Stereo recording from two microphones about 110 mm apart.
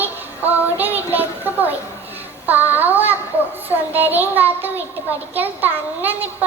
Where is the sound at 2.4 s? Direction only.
15° right (ahead or behind).